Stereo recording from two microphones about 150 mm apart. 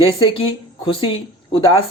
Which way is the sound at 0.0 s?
35° left (ahead or behind).